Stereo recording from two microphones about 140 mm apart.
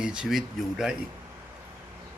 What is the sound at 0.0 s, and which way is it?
Speech, 5° right (ahead or behind).